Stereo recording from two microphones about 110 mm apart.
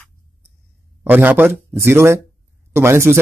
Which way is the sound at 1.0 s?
15° right (ahead or behind).